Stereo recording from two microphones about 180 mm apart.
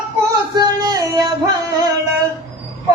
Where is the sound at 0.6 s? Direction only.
20° right (ahead or behind).